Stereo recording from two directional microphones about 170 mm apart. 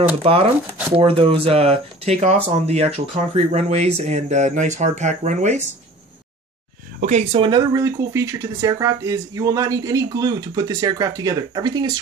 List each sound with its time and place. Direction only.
0.2 s speech: 35° right (ahead or behind)
7.0 s speech: 45° right (ahead or behind)
7.4 s speech: 25° right (ahead or behind)